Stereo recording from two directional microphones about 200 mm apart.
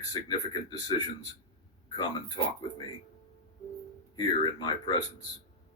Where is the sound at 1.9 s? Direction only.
20° left (ahead or behind).